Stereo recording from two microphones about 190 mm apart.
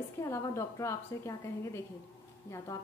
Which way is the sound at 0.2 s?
15° left (ahead or behind).